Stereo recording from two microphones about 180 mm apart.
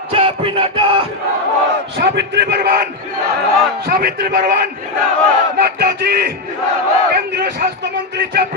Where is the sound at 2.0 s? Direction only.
70° right (ahead or behind).